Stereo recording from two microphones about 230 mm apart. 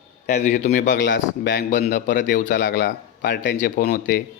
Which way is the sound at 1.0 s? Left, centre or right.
Left.